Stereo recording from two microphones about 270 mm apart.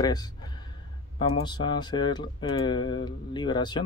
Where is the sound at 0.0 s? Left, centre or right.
Centre.